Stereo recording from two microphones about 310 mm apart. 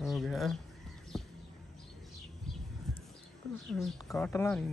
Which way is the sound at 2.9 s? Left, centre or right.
Centre.